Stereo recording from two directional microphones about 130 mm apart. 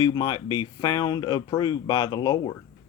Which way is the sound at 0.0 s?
30° left (ahead or behind).